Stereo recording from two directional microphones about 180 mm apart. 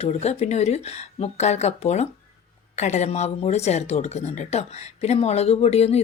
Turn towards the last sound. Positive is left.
turn(degrees=35)  # may be behind; listen again after turning